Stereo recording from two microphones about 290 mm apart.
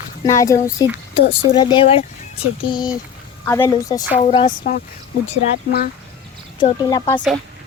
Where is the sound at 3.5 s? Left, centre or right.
Centre.